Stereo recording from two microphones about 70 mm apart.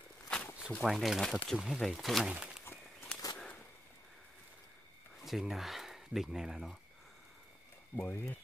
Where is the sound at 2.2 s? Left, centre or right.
Centre.